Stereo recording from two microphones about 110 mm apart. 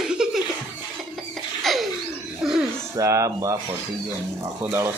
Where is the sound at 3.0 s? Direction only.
30° right (ahead or behind).